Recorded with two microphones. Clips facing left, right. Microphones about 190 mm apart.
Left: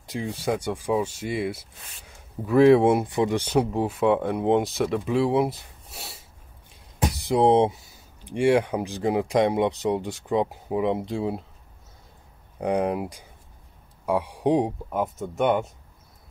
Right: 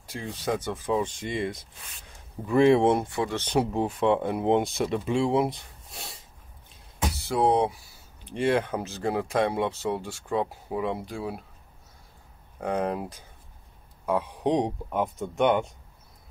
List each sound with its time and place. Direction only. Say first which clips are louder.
0.0 s speech: left 4 dB; 15° left (ahead or behind)
3.1 s speech: left 5 dB; 15° left (ahead or behind)
3.5 s speech: right 1 dB; 5° left (ahead or behind)
7.2 s speech: left 4 dB; 20° left (ahead or behind)
12.5 s speech: left 4 dB; 15° left (ahead or behind)